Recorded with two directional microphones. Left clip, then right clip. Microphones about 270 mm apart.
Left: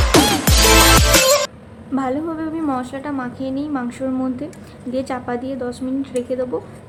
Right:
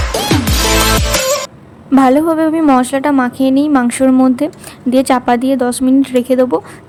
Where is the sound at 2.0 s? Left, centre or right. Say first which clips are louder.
Right 13 dB; right.